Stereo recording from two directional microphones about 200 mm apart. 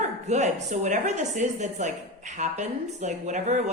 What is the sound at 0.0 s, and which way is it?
Speech, 35° right (ahead or behind).